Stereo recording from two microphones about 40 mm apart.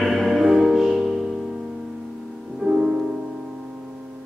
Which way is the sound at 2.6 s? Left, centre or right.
Centre.